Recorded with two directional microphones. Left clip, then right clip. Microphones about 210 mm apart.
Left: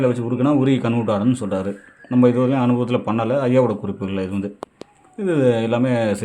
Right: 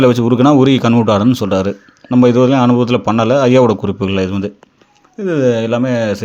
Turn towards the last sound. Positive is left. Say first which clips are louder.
# right 4 dB
turn(degrees=-15)  # may be behind; listen again after turning